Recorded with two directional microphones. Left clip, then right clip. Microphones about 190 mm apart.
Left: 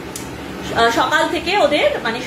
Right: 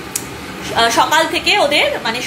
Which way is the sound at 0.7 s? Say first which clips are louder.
Right 2 dB; 15° left (ahead or behind).